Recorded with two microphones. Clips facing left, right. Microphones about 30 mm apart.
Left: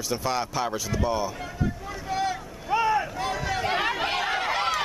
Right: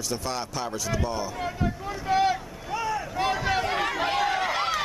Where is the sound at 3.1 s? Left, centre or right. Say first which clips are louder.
Right 3 dB; centre.